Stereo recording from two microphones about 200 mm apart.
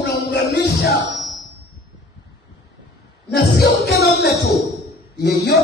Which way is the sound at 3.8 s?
55° left (ahead or behind).